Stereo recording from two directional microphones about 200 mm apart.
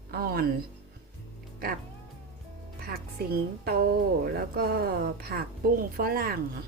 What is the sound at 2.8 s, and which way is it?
A woman's voice, 50° right (ahead or behind).